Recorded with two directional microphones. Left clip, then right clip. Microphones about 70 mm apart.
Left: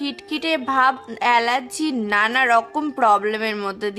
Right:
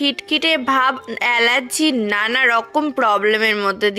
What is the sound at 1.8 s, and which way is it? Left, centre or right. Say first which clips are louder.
A woman's voice: right 2 dB; right.